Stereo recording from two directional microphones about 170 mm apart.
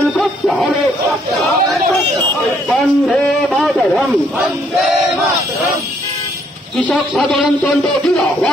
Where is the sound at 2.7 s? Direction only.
5° left (ahead or behind).